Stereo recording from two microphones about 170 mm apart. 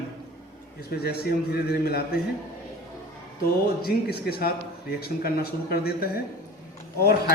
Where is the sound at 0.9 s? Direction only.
70° left (ahead or behind).